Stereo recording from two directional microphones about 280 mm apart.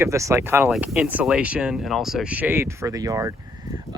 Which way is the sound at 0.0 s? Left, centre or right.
Centre.